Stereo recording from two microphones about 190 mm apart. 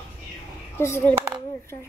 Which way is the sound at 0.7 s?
10° left (ahead or behind).